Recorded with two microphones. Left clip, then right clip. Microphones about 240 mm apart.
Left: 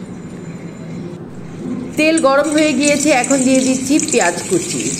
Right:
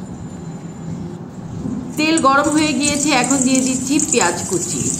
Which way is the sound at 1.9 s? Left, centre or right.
Centre.